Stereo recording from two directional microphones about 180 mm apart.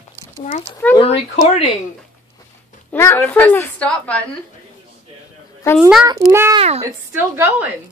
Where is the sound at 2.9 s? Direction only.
15° left (ahead or behind).